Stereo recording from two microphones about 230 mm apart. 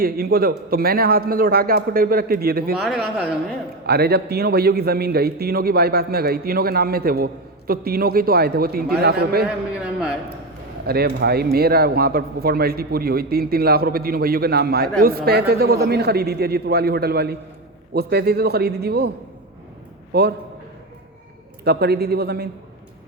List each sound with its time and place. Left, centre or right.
0.0 s speech: right
2.7 s speech: centre
3.8 s a man's voice: right
10.8 s a man's voice: right
21.6 s a man's voice: right